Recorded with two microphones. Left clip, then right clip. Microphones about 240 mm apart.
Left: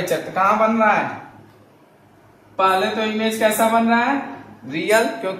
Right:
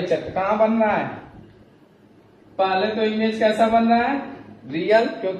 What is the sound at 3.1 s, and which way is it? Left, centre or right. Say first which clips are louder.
A woman's voice: left 2 dB; centre.